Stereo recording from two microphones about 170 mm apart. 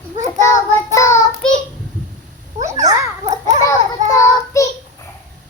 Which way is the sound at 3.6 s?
20° left (ahead or behind).